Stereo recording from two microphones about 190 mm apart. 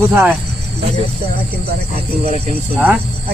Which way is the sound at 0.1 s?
10° right (ahead or behind).